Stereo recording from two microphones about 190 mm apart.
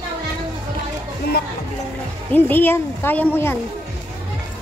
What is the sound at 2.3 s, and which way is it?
A woman's voice, 10° left (ahead or behind).